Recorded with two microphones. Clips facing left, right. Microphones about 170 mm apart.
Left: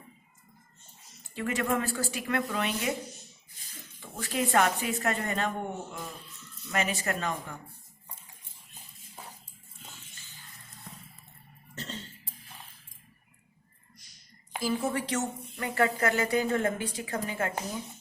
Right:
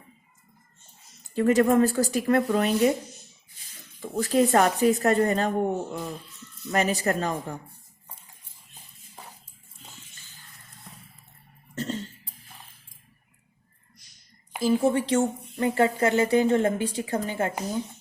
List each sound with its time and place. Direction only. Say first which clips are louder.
1.4 s a woman's voice: right 10 dB; 40° right (ahead or behind)
4.0 s a woman's voice: right 10 dB; 40° right (ahead or behind)
11.7 s cough: right 10 dB; 45° right (ahead or behind)
14.6 s speech: right 8 dB; 25° right (ahead or behind)